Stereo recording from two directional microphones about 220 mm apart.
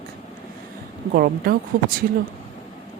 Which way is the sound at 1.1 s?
45° right (ahead or behind).